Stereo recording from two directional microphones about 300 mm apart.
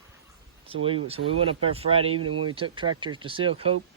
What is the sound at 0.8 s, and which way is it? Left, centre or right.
Speech, centre.